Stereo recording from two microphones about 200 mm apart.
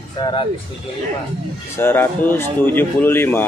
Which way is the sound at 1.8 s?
10° left (ahead or behind).